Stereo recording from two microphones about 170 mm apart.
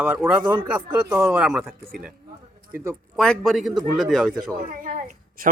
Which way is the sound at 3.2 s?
5° left (ahead or behind).